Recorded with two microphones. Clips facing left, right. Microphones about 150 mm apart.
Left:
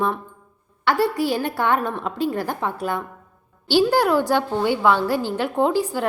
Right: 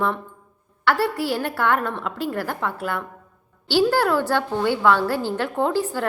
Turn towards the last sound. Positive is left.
turn(degrees=15)  # may be behind; listen again after turning